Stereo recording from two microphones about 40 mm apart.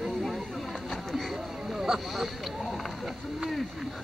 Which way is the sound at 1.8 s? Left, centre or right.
Centre.